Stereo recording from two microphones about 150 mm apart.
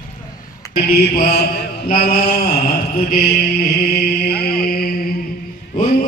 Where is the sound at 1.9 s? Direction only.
80° left.